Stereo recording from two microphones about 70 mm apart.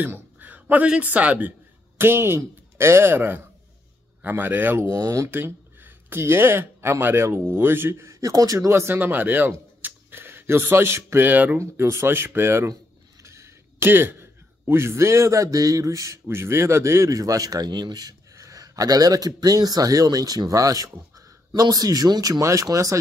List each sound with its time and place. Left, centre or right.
0.0 s a man's voice: right
2.0 s a man's voice: right
4.9 s speech: right
5.3 s speech: right
11.2 s a man's voice: right
11.5 s a man's voice: right
16.3 s speech: right
22.4 s speech: right